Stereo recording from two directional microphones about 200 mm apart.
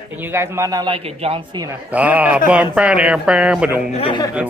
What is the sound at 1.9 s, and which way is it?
Speech, 5° right (ahead or behind).